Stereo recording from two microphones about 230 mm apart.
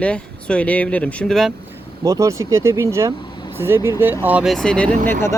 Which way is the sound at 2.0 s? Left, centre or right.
Centre.